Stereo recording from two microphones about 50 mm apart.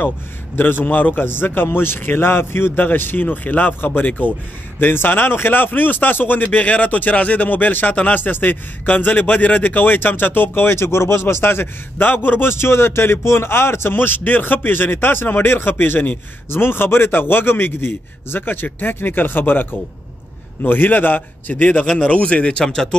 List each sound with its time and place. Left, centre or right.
0.6 s a man's voice: left
0.8 s a man's voice: left
2.7 s speech: left
4.7 s a man's voice: left; by 22.9 s centre